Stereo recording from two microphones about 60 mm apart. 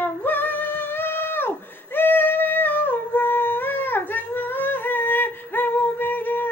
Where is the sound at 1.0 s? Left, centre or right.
Left.